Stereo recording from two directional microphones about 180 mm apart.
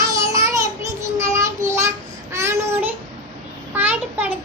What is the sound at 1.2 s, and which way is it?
Child singing, 15° right (ahead or behind).